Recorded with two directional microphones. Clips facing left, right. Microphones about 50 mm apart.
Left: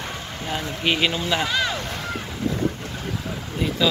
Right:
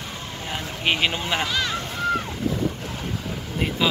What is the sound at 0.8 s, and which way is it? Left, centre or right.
Speech, centre.